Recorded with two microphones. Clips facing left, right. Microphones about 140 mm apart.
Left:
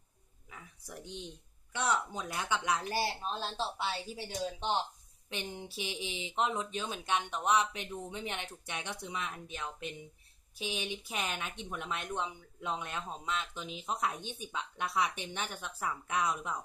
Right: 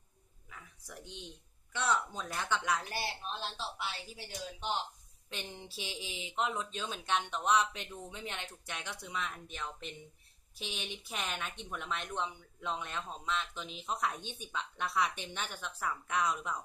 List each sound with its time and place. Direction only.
1.7 s speech: 15° left (ahead or behind)
2.9 s speech: 35° left (ahead or behind)
5.3 s speech: 15° left (ahead or behind)
10.6 s speech: 10° left (ahead or behind)